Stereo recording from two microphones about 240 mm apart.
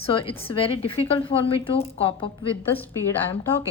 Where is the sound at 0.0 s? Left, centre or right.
Left.